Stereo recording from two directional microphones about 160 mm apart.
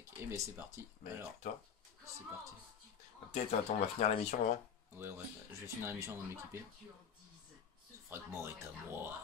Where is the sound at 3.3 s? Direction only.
45° left (ahead or behind).